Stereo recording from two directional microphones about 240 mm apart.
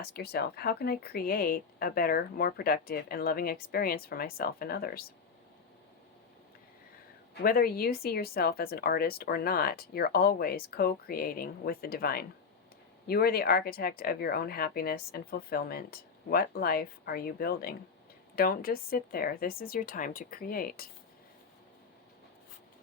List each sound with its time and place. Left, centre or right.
0.0 s speech: left
7.4 s speech: left